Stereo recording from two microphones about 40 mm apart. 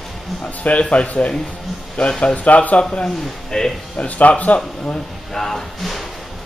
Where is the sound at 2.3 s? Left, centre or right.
Left.